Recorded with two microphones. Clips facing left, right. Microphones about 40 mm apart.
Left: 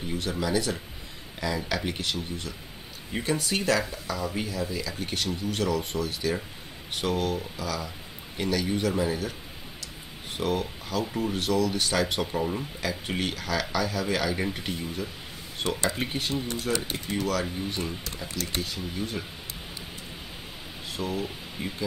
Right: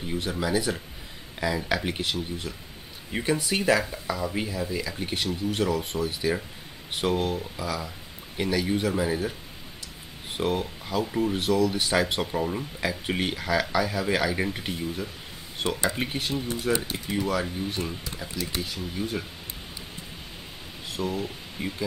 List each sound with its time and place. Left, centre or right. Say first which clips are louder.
0.1 s speech: right 1 dB; centre
10.3 s speech: right 1 dB; centre
20.9 s speech: right 1 dB; centre